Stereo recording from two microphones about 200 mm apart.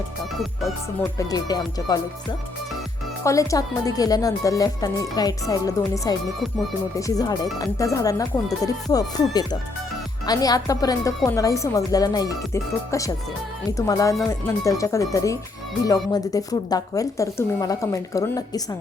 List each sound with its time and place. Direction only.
1.3 s speech: 20° left (ahead or behind)
3.2 s speech: 15° left (ahead or behind)